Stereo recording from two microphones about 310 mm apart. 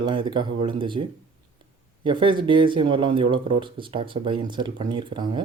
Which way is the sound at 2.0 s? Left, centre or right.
Centre.